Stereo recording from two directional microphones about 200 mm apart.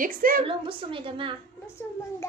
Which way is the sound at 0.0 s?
45° right (ahead or behind).